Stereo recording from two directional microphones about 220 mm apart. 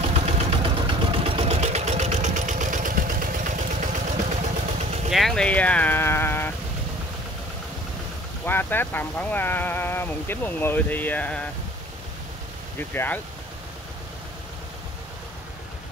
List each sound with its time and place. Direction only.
0.1 s vehicle: 30° right (ahead or behind)
5.1 s speech: centre (ahead or behind)
8.5 s speech: 10° left (ahead or behind)
12.7 s speech: 10° left (ahead or behind)